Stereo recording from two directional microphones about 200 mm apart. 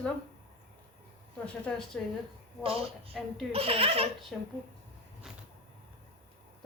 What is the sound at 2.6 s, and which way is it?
Speech, 30° right (ahead or behind).